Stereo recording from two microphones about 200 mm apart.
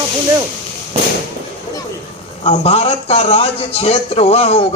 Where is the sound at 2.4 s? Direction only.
30° left (ahead or behind).